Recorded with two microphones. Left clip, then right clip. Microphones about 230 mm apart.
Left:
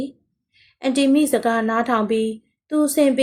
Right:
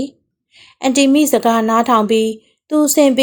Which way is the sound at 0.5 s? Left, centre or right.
Right.